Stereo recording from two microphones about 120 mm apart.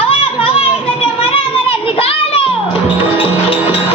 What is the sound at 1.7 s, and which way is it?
Children playing, 50° left (ahead or behind).